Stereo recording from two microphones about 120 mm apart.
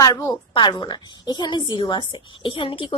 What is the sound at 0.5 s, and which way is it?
A woman's voice, 40° left (ahead or behind).